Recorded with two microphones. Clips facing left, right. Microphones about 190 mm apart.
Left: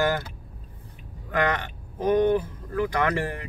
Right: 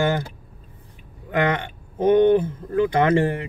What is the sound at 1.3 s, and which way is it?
Speech, 25° right (ahead or behind).